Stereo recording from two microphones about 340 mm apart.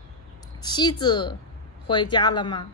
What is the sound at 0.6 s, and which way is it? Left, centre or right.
Speech, centre.